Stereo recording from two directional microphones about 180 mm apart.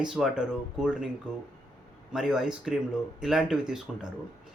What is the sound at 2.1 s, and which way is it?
Speech, centre (ahead or behind).